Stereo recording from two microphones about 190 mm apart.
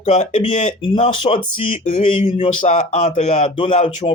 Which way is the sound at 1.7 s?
40° left (ahead or behind).